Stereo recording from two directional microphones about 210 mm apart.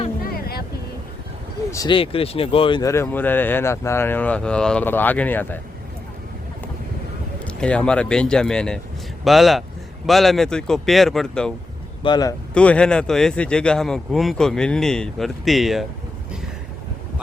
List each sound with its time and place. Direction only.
0.2 s vehicle: 45° left (ahead or behind)
1.7 s speech: 20° left (ahead or behind)
7.4 s speech: 5° left (ahead or behind)
12.0 s speech: 20° left (ahead or behind)
12.5 s speech: 5° left (ahead or behind)